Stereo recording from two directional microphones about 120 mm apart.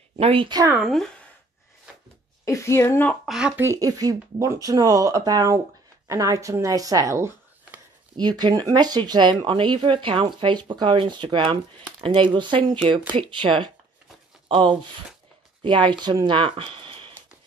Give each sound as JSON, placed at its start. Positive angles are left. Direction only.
{"t": 0.1, "sound": "speech", "side_deg": -50}
{"t": 0.7, "sound": "speech", "side_deg": 0}
{"t": 2.4, "sound": "a woman's voice", "side_deg": 25}
{"t": 3.3, "sound": "speech", "side_deg": -5}
{"t": 3.6, "sound": "speech", "side_deg": -30}
{"t": 8.2, "sound": "speech", "side_deg": -35}